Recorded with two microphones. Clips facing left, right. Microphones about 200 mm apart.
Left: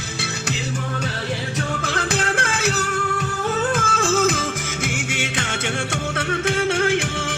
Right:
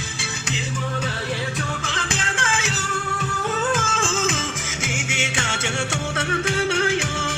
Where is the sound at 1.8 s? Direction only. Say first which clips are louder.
Left 6 dB; 60° left (ahead or behind).